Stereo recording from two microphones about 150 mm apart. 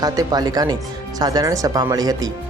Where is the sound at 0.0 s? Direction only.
25° right (ahead or behind).